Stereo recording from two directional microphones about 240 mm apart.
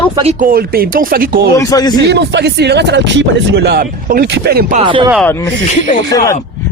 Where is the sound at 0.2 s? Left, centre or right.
Right.